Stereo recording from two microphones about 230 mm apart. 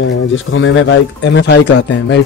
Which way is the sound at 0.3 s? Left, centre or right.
Left.